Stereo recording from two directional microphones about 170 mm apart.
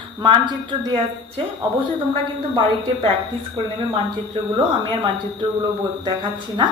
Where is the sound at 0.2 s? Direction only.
25° right (ahead or behind).